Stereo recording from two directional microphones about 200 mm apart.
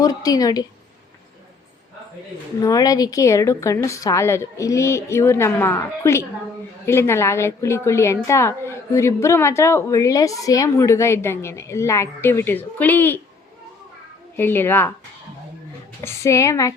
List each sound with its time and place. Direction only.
0.0 s a woman's voice: 20° left (ahead or behind)
2.6 s a woman's voice: 15° left (ahead or behind)
14.3 s a woman's voice: 10° left (ahead or behind)
16.0 s a woman's voice: 15° left (ahead or behind)